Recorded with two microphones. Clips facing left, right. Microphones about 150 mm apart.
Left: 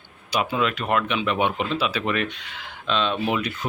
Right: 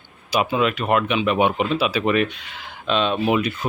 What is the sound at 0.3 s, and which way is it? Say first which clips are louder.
Speech: right 3 dB; 10° right (ahead or behind).